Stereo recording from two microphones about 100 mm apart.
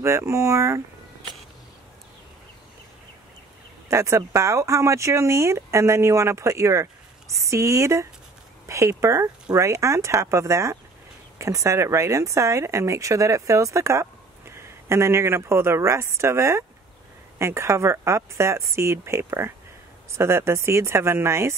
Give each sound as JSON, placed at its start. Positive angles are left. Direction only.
{"t": 0.0, "sound": "speech", "side_deg": -30}
{"t": 3.9, "sound": "a woman's voice", "side_deg": -30}